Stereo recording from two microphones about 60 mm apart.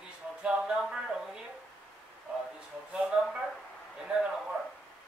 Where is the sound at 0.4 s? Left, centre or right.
Centre.